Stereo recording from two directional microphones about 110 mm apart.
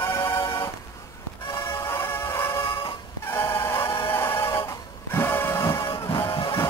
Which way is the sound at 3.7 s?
20° left (ahead or behind).